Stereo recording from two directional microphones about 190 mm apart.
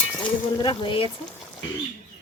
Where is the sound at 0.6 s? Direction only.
25° left (ahead or behind).